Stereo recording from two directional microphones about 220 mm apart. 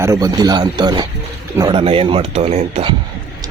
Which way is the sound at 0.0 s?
15° right (ahead or behind).